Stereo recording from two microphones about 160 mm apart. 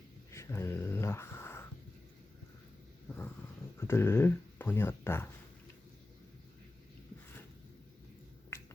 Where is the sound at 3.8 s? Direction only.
15° left (ahead or behind).